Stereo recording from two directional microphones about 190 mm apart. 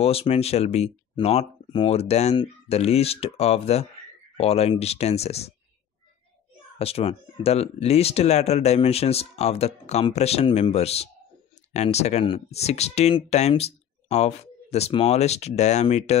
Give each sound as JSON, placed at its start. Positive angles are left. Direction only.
{"t": 0.0, "sound": "speech", "side_deg": 30}
{"t": 6.8, "sound": "speech", "side_deg": 30}